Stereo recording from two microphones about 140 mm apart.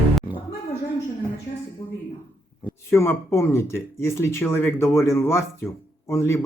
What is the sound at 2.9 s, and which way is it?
Speech, 20° left (ahead or behind).